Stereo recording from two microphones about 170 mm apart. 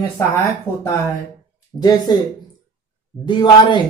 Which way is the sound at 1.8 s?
25° left (ahead or behind).